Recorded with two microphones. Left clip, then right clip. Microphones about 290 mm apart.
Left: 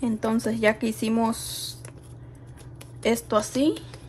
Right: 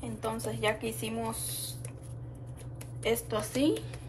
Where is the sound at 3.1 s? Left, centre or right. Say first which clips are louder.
Left 7 dB; centre.